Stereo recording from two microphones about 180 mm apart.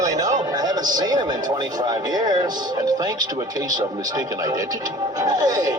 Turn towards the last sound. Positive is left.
turn(degrees=-20)  # may be behind; listen again after turning